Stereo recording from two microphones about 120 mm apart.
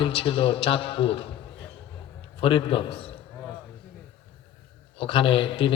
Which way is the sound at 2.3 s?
45° left (ahead or behind).